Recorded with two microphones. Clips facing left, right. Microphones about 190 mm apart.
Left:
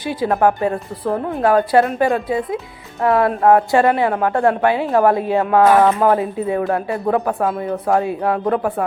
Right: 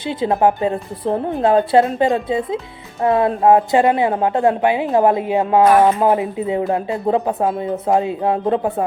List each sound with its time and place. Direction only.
0.0 s a woman's voice: 25° right (ahead or behind)